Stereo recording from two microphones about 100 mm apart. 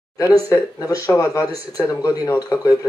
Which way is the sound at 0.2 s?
35° left (ahead or behind).